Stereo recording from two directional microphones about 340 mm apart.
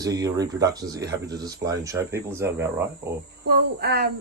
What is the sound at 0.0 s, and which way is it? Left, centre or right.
Speech, centre.